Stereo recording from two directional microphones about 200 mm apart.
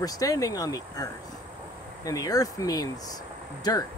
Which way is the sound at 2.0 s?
15° left (ahead or behind).